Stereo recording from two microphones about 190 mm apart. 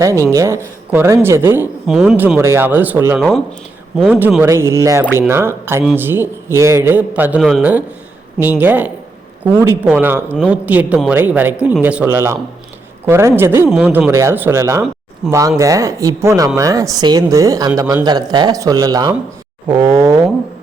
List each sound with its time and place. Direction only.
0.0 s a man's voice: 15° right (ahead or behind)
3.2 s speech: centre (ahead or behind)
4.1 s a man's voice: 10° right (ahead or behind)